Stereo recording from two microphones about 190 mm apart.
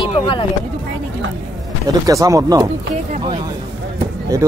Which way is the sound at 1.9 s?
20° right (ahead or behind).